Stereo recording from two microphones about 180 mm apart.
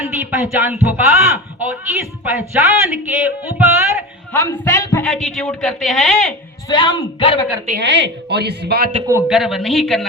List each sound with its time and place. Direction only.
0.0 s a man's voice: 10° right (ahead or behind)
4.3 s a woman's voice: 15° left (ahead or behind)
6.7 s speech: 25° left (ahead or behind)
7.8 s speech: 70° right (ahead or behind)
9.2 s a woman's voice: centre (ahead or behind)